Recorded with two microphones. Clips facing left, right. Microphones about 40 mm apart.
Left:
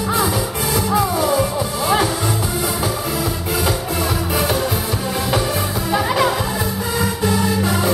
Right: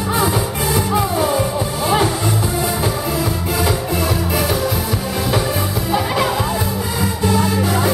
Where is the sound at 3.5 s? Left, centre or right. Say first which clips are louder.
Right 1 dB; centre.